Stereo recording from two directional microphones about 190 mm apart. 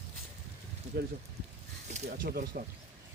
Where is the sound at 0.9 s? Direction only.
60° right (ahead or behind).